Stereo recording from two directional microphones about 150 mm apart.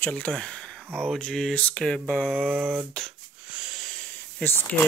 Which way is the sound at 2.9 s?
Centre (ahead or behind).